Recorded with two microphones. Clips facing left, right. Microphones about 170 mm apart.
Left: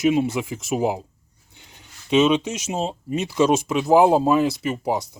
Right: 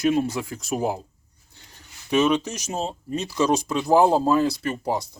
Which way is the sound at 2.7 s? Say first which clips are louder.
Left 2 dB; 10° left (ahead or behind).